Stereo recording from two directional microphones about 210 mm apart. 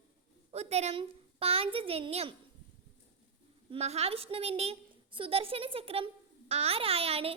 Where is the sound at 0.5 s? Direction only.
30° right (ahead or behind).